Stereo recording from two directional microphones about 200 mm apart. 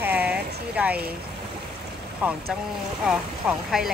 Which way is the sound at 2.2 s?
5° right (ahead or behind).